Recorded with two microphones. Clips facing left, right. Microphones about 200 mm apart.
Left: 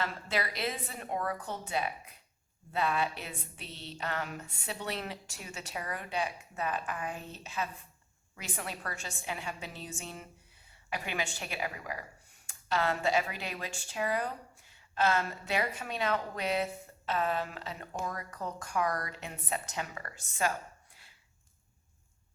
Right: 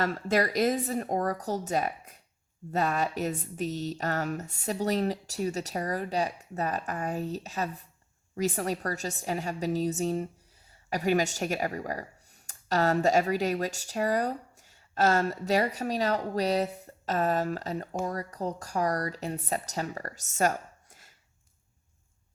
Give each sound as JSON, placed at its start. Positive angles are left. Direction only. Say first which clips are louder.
{"t": 0.0, "sound": "a woman's voice", "louder": "right 8 dB", "side_deg": -45}